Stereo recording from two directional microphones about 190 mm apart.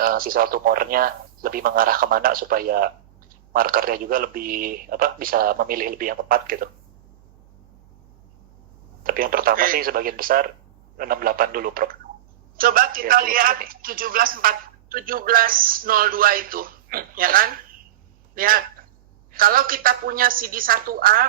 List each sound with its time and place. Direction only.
0.0 s a man's voice: 50° right (ahead or behind)
9.0 s a man's voice: 50° right (ahead or behind)